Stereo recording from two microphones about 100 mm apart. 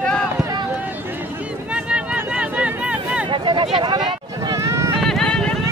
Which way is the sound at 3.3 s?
55° right (ahead or behind).